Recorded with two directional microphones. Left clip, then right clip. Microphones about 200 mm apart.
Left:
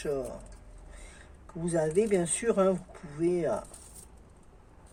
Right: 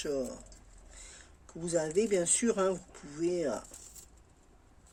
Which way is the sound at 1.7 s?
55° right (ahead or behind).